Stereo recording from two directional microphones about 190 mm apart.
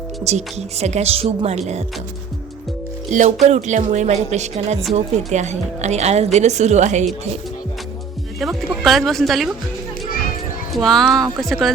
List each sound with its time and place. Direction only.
0.3 s a woman's voice: 35° right (ahead or behind)
3.1 s a woman's voice: 40° right (ahead or behind)
8.4 s speech: centre (ahead or behind)
10.8 s speech: centre (ahead or behind)